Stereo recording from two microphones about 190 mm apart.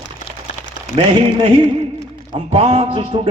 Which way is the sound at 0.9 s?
30° right (ahead or behind).